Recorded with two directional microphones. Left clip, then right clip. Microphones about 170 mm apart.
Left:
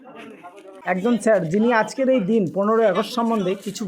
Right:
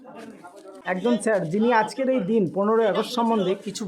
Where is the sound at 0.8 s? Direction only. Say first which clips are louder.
Left 3 dB; 15° left (ahead or behind).